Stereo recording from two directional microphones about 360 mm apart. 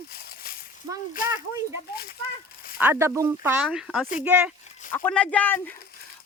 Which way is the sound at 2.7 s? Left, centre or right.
Centre.